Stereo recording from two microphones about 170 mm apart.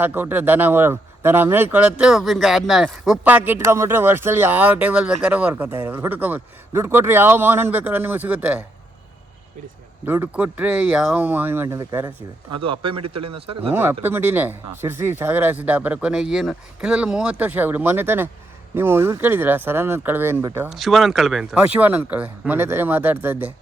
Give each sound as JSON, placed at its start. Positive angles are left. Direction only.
{"t": 0.0, "sound": "speech", "side_deg": -10}
{"t": 10.1, "sound": "speech", "side_deg": -10}
{"t": 12.6, "sound": "speech", "side_deg": -30}
{"t": 14.0, "sound": "speech", "side_deg": -10}
{"t": 20.7, "sound": "speech", "side_deg": 0}